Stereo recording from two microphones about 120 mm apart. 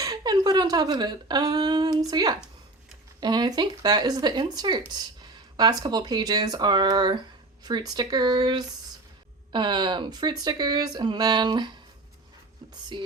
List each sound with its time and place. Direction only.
0.0 s speech: 35° right (ahead or behind)
12.9 s music: 45° right (ahead or behind)